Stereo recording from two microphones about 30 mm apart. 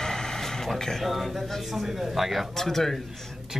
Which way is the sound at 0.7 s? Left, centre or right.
Centre.